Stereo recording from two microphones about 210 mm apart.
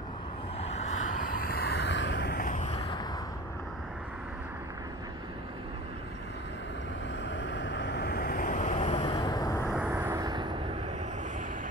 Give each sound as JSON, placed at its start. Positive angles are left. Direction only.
{"t": 0.6, "sound": "a sound", "side_deg": 30}
{"t": 1.4, "sound": "vehicle", "side_deg": 45}
{"t": 7.2, "sound": "vehicle", "side_deg": 60}
{"t": 9.7, "sound": "vehicle", "side_deg": -5}